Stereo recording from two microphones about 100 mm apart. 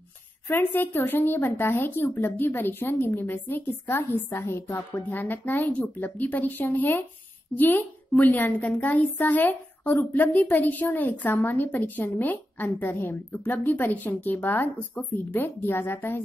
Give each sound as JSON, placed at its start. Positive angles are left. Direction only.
{"t": 0.5, "sound": "a woman's voice", "side_deg": 20}